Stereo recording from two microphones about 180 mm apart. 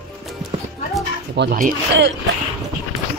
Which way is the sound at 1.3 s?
55° right (ahead or behind).